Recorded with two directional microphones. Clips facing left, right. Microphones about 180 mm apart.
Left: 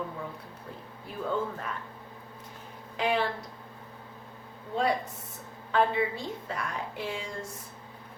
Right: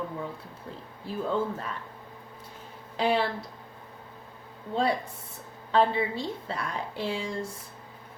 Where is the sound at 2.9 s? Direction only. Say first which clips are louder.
Right 3 dB; 30° right (ahead or behind).